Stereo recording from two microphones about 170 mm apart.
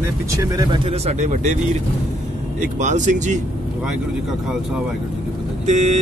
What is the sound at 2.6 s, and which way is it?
Speech, 45° right (ahead or behind).